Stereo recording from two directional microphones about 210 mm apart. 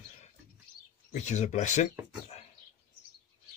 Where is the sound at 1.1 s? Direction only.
35° left (ahead or behind).